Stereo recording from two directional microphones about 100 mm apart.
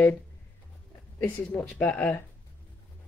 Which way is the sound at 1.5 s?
15° left (ahead or behind).